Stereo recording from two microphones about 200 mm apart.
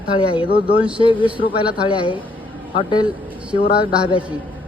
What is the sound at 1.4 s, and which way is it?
Speech, 25° left (ahead or behind).